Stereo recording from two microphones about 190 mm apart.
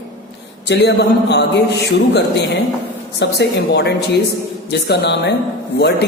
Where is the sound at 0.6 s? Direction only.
60° left (ahead or behind).